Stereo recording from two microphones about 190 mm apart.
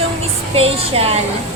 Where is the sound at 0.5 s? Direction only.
30° right (ahead or behind).